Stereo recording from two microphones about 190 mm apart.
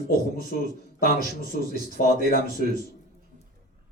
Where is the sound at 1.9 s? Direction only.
50° left (ahead or behind).